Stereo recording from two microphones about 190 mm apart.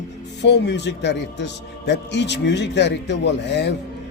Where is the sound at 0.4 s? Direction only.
65° left (ahead or behind).